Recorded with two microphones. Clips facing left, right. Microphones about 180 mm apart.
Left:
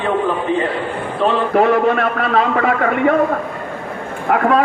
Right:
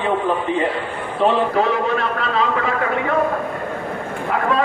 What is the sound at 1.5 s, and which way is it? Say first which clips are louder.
A man's voice: left 5 dB; 60° left (ahead or behind).